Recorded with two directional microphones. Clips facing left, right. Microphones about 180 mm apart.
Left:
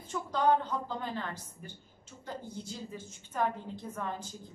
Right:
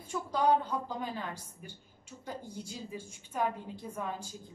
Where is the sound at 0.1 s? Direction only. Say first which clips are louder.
Even; 10° right (ahead or behind).